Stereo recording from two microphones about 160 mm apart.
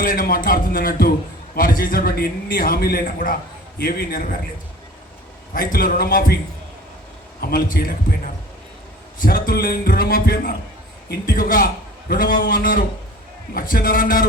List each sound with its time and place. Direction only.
0.0 s a man's voice: 60° left (ahead or behind)
5.5 s a man's voice: 65° left (ahead or behind)
7.4 s a man's voice: 65° left (ahead or behind)